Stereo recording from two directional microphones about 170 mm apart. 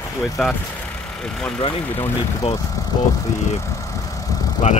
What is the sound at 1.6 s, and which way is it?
Speech, 30° left (ahead or behind).